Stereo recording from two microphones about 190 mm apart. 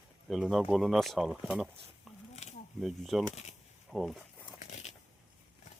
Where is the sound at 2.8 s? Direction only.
Centre (ahead or behind).